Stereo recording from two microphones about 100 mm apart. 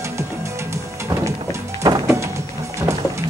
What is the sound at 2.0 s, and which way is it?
Music, 30° right (ahead or behind).